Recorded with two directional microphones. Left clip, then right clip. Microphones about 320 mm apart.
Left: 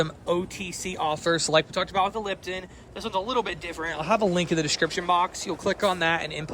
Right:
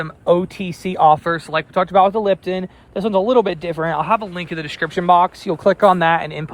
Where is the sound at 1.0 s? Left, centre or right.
Centre.